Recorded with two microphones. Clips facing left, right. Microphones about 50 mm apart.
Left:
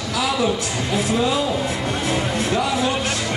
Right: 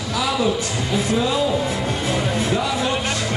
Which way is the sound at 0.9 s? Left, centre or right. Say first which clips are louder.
Even; centre.